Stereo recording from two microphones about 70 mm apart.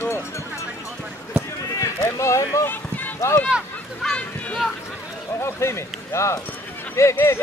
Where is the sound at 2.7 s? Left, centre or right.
Left.